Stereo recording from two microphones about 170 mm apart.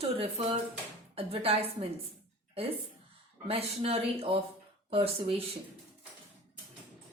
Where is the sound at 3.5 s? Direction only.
35° right (ahead or behind).